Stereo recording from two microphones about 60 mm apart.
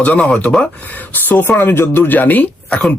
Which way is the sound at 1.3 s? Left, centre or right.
Left.